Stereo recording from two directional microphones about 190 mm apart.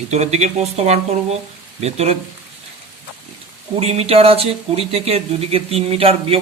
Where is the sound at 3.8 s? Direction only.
30° right (ahead or behind).